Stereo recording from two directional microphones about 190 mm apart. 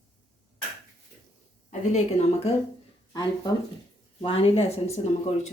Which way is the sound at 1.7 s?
35° left (ahead or behind).